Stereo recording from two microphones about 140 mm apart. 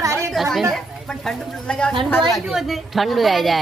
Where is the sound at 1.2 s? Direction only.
5° left (ahead or behind).